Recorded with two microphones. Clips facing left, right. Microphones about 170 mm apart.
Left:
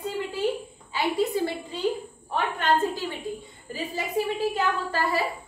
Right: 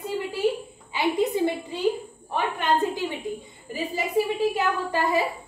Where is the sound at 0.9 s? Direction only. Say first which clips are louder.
Right 2 dB; 20° right (ahead or behind).